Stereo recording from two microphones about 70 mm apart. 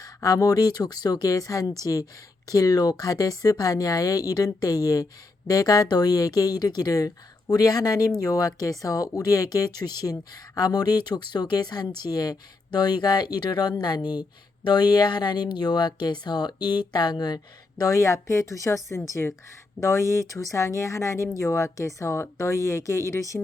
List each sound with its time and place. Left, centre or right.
0.0 s speech: left